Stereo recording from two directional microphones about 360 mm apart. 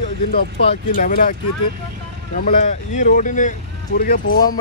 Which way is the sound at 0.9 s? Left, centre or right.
Left.